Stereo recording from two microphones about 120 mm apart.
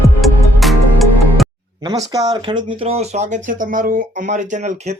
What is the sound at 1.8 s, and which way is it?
Speech, 35° right (ahead or behind).